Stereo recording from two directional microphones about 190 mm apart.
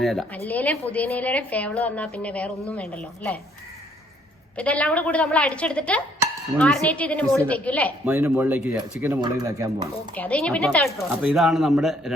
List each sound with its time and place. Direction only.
0.0 s a woman's voice: centre (ahead or behind)
4.5 s a woman's voice: 5° left (ahead or behind)
8.0 s speech: 10° right (ahead or behind)
9.2 s speech: 20° right (ahead or behind)
10.2 s speech: 5° left (ahead or behind)